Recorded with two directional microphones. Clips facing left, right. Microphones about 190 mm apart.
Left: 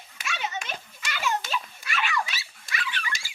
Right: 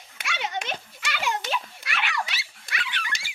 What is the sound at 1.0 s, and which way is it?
Dog, 65° right (ahead or behind).